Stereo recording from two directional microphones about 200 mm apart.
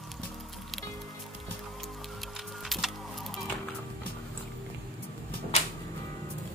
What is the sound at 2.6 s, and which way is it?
Music, centre (ahead or behind).